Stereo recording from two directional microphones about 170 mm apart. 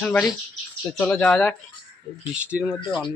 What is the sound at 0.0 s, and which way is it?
Speech, 5° left (ahead or behind).